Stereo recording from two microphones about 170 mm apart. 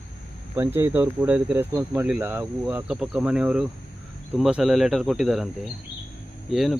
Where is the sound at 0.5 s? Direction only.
15° right (ahead or behind).